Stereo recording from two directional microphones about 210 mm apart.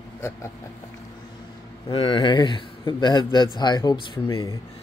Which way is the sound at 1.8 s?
25° left (ahead or behind).